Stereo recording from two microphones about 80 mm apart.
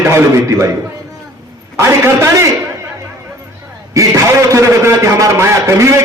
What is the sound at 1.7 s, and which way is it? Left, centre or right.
Speech, right.